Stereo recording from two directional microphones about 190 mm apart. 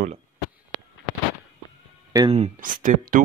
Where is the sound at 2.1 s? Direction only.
30° right (ahead or behind).